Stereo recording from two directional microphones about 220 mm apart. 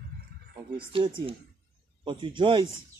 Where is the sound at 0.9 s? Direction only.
25° right (ahead or behind).